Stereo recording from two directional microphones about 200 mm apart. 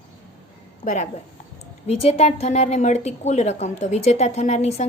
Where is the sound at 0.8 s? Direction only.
40° left (ahead or behind).